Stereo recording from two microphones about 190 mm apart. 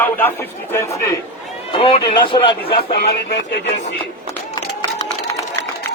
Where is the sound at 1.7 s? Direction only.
30° left (ahead or behind).